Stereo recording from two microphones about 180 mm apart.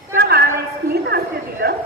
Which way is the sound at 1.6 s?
60° right (ahead or behind).